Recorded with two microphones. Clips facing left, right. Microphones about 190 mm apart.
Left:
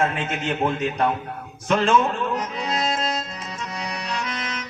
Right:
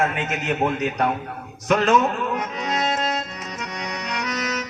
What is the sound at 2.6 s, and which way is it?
Accordion, 30° left (ahead or behind).